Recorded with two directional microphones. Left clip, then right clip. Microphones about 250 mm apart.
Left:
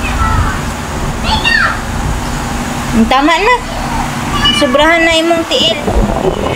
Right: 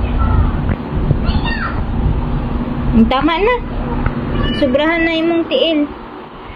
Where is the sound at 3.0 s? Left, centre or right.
Centre.